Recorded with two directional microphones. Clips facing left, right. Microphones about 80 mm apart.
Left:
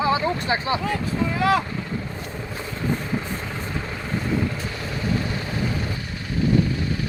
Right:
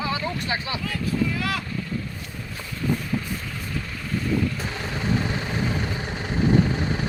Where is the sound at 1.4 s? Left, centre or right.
Left.